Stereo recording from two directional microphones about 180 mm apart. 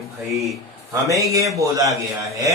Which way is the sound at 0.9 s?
15° right (ahead or behind).